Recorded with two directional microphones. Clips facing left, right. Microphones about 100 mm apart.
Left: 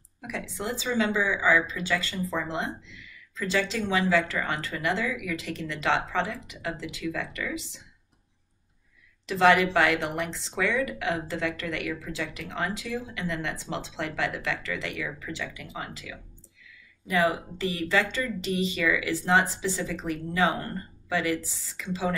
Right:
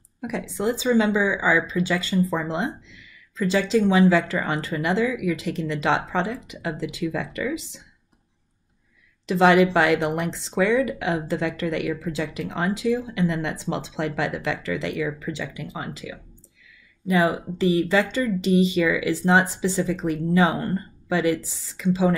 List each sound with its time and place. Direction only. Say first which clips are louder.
0.2 s speech: right 8 dB; 20° right (ahead or behind)
9.2 s speech: right 4 dB; 20° right (ahead or behind)